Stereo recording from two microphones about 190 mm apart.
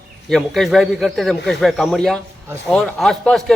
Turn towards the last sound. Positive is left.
turn(degrees=5)  # may be behind; listen again after turning